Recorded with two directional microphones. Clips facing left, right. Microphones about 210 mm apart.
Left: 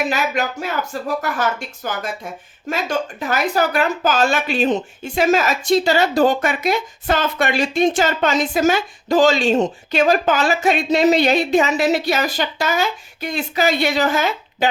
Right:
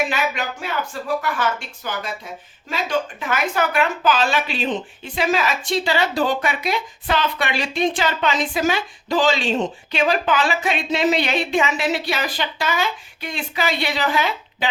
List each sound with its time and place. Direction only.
0.1 s speech: 40° left (ahead or behind)
3.2 s speech: 40° left (ahead or behind)